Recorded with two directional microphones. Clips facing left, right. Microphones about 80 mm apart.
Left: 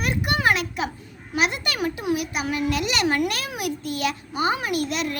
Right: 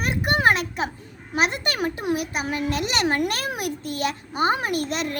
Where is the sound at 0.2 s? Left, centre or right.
Right.